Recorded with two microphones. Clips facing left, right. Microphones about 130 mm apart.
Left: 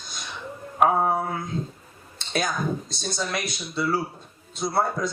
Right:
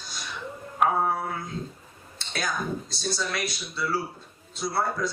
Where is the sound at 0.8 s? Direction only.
25° left (ahead or behind).